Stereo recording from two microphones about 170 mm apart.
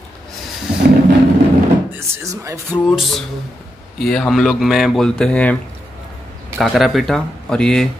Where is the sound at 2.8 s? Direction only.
Centre (ahead or behind).